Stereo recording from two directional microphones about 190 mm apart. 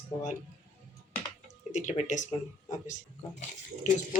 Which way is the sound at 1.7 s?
40° left (ahead or behind).